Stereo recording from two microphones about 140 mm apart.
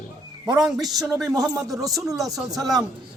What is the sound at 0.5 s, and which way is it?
Speech, centre (ahead or behind).